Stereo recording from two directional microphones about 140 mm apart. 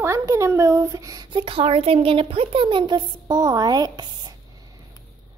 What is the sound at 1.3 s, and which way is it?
Speech, 40° right (ahead or behind).